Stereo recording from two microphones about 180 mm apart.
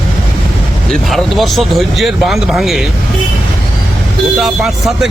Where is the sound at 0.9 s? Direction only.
Centre (ahead or behind).